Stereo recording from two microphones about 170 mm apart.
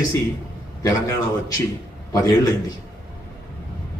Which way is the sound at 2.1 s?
20° left (ahead or behind).